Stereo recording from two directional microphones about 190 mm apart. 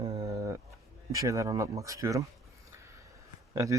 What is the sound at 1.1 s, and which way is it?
Speech, 15° right (ahead or behind).